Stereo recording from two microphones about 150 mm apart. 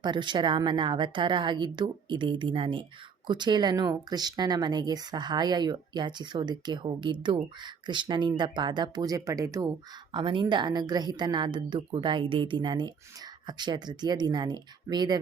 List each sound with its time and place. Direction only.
0.0 s a woman's voice: 30° right (ahead or behind)
10.1 s a woman's voice: 30° right (ahead or behind)